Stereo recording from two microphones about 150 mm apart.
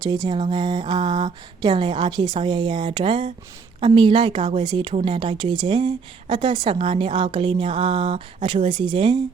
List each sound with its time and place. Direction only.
0.0 s a woman's voice: 25° right (ahead or behind)